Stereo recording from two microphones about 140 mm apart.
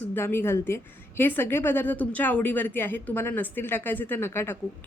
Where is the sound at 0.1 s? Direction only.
15° left (ahead or behind).